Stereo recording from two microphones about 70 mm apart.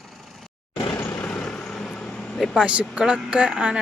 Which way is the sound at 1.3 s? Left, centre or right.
Centre.